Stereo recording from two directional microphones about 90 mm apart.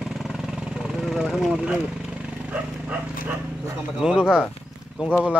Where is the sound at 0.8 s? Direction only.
5° right (ahead or behind).